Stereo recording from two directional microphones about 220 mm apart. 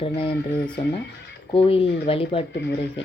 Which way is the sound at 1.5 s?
25° left (ahead or behind).